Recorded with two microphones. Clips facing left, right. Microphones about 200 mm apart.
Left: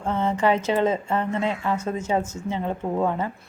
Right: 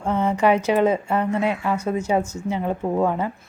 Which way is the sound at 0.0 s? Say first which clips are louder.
Right 3 dB; 10° right (ahead or behind).